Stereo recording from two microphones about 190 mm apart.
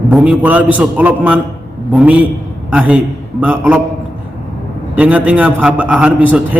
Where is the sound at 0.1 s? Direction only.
5° right (ahead or behind).